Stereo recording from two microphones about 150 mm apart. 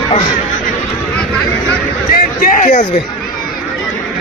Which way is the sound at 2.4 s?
60° left (ahead or behind).